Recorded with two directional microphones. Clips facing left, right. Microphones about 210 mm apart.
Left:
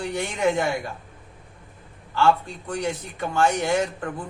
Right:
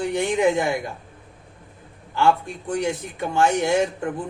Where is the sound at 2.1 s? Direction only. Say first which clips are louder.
Right 1 dB; 15° right (ahead or behind).